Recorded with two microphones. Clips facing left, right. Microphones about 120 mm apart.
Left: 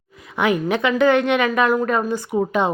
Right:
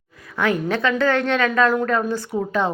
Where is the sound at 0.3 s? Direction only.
15° left (ahead or behind).